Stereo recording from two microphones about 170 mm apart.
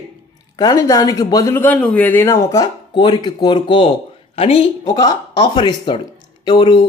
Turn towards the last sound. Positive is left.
turn(degrees=25)  # may be behind; listen again after turning